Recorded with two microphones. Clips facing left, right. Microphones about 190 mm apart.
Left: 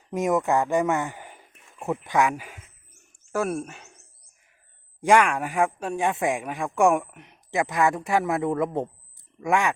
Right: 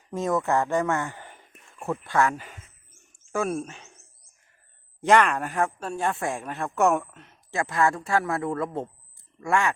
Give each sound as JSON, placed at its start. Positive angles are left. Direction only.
{"t": 0.1, "sound": "speech", "side_deg": 15}
{"t": 4.9, "sound": "speech", "side_deg": 10}